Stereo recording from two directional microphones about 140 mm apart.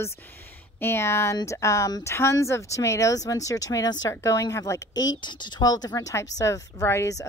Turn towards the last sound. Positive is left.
turn(degrees=20)  # may be behind; listen again after turning